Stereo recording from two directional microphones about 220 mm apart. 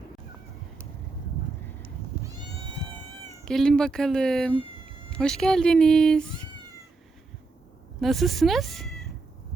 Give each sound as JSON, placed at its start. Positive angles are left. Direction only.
{"t": 3.4, "sound": "speech", "side_deg": 5}
{"t": 8.0, "sound": "speech", "side_deg": 0}